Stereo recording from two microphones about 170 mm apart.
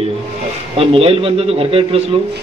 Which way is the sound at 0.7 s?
35° right (ahead or behind).